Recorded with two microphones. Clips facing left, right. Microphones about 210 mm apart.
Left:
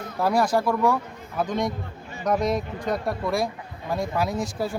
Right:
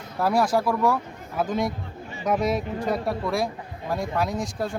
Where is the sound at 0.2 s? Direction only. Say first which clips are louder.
Even; centre (ahead or behind).